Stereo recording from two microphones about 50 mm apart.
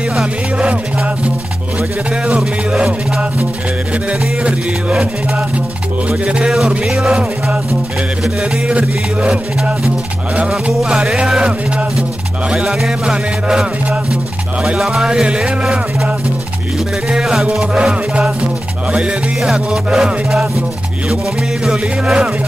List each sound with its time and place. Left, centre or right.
0.6 s music: right
6.0 s music: right
6.9 s music: centre
8.4 s music: right
10.5 s music: centre
11.1 s music: centre
12.7 s music: centre
14.8 s music: centre
17.1 s music: centre
21.6 s music: centre